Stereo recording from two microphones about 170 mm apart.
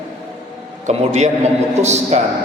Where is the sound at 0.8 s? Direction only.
40° right (ahead or behind).